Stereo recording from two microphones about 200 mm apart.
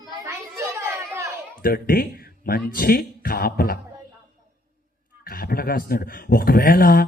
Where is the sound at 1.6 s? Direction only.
50° left (ahead or behind).